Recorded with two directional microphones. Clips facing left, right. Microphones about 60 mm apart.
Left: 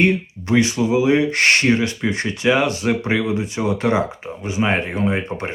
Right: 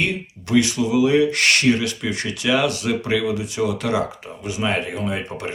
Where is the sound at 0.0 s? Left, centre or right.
Left.